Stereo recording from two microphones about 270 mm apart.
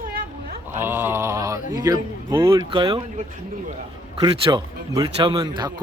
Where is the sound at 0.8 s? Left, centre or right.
Centre.